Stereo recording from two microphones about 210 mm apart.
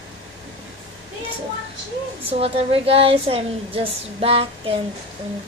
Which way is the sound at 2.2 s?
30° right (ahead or behind).